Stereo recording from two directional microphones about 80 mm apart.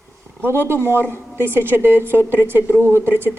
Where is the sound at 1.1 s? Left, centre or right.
Right.